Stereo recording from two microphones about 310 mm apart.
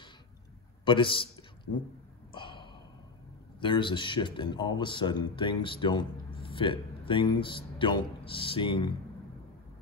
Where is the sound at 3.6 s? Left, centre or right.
Centre.